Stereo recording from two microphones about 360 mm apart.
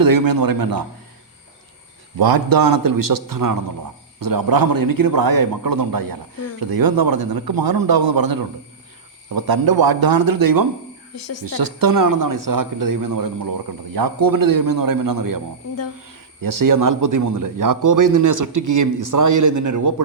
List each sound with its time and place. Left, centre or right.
0.0 s a man's voice: right
2.1 s a man's voice: right
11.1 s speech: left
11.4 s speech: right